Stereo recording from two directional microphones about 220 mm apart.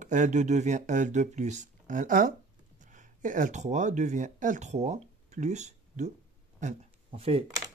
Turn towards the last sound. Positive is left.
turn(degrees=-25)  # may be behind; listen again after turning